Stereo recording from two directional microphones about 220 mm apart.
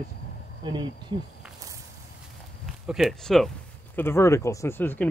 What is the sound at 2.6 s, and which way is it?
Speech, centre (ahead or behind).